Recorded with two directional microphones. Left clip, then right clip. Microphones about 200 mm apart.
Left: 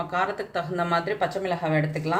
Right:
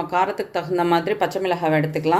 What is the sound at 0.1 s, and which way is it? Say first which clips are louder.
A woman's voice: right 7 dB; 40° right (ahead or behind).